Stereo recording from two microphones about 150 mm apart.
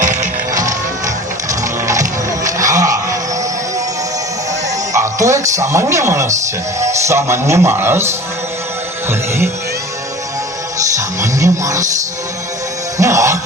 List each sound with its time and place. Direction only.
0.0 s music: 55° right (ahead or behind)
1.5 s a sound: 20° right (ahead or behind)
4.9 s speech: 20° right (ahead or behind)
10.9 s music: 20° right (ahead or behind)
13.0 s music: 20° right (ahead or behind)